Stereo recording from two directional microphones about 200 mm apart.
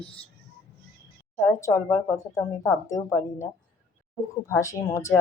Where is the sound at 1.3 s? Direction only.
15° left (ahead or behind).